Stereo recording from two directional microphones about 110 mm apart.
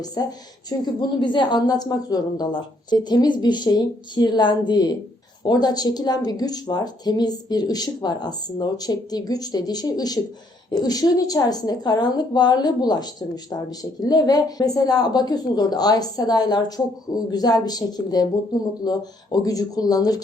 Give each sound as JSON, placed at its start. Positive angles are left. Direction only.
{"t": 0.0, "sound": "a woman's voice", "side_deg": 35}
{"t": 1.2, "sound": "a woman's voice", "side_deg": 45}